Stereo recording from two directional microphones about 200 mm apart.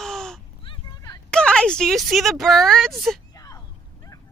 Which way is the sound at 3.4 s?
15° left (ahead or behind).